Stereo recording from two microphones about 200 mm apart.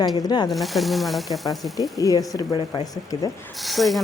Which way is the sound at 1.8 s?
20° left (ahead or behind).